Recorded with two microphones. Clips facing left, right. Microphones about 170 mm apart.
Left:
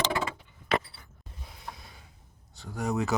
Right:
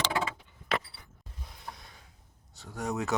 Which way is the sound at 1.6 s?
Centre (ahead or behind).